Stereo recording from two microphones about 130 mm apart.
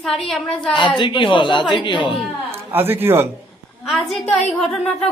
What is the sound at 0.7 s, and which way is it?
A woman's voice, 35° left (ahead or behind).